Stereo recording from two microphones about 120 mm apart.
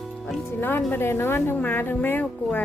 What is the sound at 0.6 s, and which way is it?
Speech, 15° left (ahead or behind).